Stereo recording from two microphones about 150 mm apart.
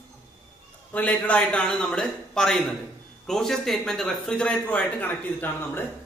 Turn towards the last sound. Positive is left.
turn(degrees=15)  # may be behind; listen again after turning